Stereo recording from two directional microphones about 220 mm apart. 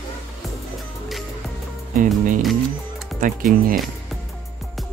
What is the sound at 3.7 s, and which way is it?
Music, centre (ahead or behind).